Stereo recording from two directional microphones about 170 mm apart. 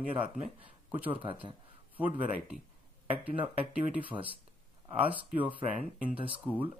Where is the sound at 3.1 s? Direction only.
35° right (ahead or behind).